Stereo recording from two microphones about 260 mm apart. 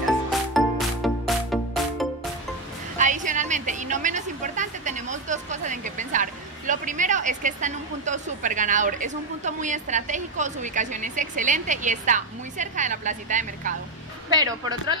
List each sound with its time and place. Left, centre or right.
0.3 s music: centre
3.0 s a woman's voice: right
14.3 s speech: centre